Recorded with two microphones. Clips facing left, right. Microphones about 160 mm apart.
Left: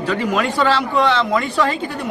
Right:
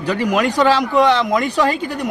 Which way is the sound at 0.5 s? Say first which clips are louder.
Right 4 dB; 15° right (ahead or behind).